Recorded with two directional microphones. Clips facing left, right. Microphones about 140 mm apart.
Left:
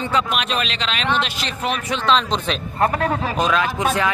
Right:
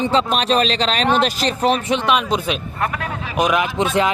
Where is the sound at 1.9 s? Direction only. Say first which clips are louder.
Right 1 dB; 15° right (ahead or behind).